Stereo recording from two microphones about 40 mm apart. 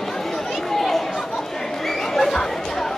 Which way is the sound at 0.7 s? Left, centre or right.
Centre.